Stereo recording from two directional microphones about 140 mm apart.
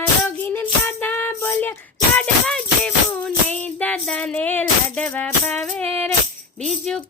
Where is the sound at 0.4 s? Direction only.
15° left (ahead or behind).